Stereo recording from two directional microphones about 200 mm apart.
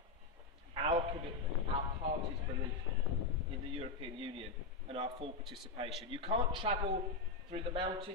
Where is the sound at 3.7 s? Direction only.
30° right (ahead or behind).